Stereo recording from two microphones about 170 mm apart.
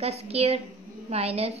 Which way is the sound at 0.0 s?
35° right (ahead or behind).